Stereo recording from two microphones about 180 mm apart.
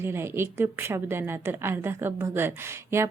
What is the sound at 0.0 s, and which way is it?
A woman's voice, 15° right (ahead or behind).